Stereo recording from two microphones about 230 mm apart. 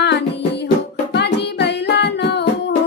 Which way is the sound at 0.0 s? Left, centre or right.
Left.